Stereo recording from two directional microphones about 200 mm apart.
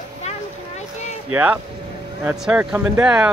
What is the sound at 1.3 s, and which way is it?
Speech, 5° right (ahead or behind).